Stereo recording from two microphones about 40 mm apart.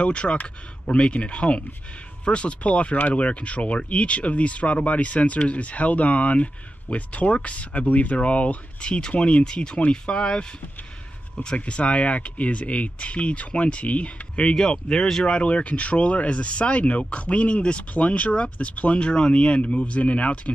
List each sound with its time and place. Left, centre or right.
0.0 s speech: left
9.4 s speech: left
11.4 s speech: left